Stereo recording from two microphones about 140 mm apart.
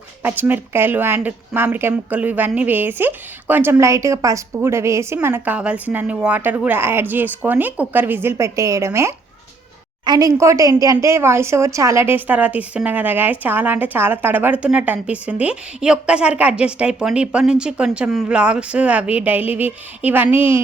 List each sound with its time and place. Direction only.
0.2 s a woman's voice: 15° right (ahead or behind)